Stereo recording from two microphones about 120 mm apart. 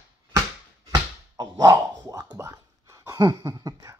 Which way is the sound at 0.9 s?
35° right (ahead or behind).